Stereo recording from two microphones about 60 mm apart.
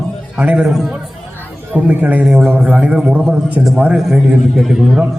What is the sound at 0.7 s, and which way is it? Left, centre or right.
Speech, centre.